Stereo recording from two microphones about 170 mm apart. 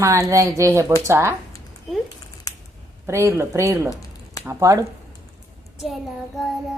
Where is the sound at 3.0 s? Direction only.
15° right (ahead or behind).